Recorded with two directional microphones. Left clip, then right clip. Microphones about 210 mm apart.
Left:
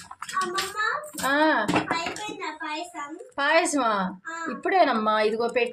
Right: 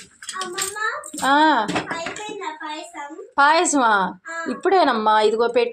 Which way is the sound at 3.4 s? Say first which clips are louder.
Right 6 dB; 20° right (ahead or behind).